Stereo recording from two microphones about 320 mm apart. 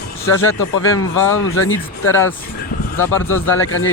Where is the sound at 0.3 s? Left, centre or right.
Left.